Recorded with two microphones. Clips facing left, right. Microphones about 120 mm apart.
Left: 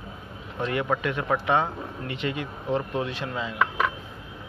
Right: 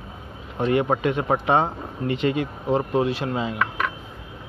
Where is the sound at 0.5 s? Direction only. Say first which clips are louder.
Right 5 dB; 25° right (ahead or behind).